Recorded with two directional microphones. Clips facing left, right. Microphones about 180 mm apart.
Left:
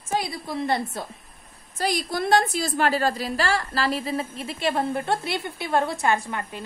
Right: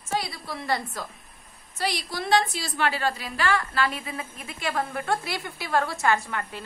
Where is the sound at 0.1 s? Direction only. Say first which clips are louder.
Left 3 dB; 20° left (ahead or behind).